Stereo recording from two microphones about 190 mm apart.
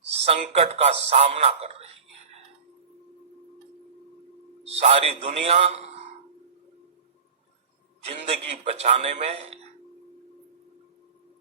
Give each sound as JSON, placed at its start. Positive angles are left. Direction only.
{"t": 0.1, "sound": "a man's voice", "side_deg": -35}
{"t": 4.6, "sound": "a man's voice", "side_deg": -35}
{"t": 8.0, "sound": "a man's voice", "side_deg": -35}